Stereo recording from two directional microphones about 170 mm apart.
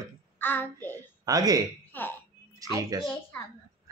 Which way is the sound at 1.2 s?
20° right (ahead or behind).